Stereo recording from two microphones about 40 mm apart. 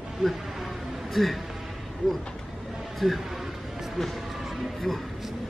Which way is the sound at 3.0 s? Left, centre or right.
Centre.